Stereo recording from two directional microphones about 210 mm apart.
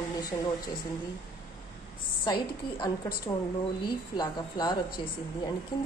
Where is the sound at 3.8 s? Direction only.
20° left (ahead or behind).